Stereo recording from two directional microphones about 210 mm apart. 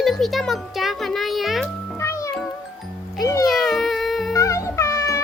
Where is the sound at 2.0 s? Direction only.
15° left (ahead or behind).